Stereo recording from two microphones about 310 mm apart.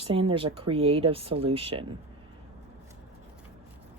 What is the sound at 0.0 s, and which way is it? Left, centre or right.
Speech, centre.